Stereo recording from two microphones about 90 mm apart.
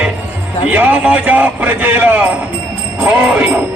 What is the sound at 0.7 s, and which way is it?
A man's voice, 20° right (ahead or behind).